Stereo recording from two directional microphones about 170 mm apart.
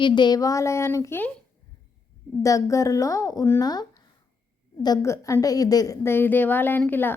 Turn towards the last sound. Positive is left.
turn(degrees=10)  # may be behind; listen again after turning